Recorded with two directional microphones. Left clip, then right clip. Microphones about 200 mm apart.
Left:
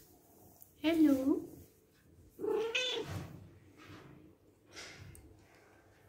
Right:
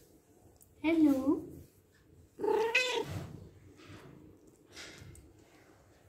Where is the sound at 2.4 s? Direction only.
10° right (ahead or behind).